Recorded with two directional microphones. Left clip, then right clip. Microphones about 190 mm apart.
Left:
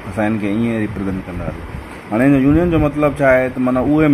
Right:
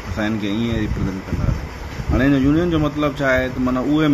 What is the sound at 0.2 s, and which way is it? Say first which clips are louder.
Speech: left 4 dB; 20° left (ahead or behind).